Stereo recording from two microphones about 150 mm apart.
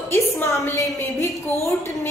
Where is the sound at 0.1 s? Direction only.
15° left (ahead or behind).